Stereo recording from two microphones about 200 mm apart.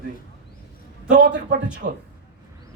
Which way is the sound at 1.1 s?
60° right (ahead or behind).